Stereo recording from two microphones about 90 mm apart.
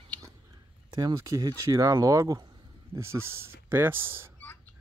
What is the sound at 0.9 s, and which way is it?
Speech, 45° right (ahead or behind).